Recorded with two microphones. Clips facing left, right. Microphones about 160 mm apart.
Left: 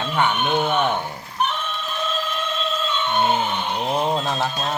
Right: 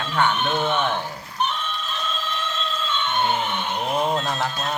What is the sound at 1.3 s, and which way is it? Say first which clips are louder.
Music: left 2 dB; centre (ahead or behind).